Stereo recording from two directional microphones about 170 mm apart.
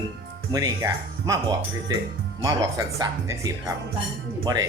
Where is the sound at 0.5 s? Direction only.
20° right (ahead or behind).